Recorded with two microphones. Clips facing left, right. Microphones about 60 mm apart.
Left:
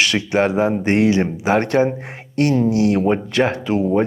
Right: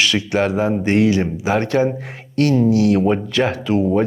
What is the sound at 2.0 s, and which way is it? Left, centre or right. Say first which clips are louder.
Speech: right 1 dB; left.